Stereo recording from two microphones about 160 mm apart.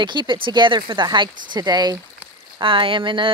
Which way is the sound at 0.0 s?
30° right (ahead or behind).